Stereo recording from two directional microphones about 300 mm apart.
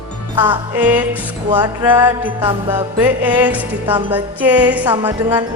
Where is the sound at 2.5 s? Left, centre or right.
Centre.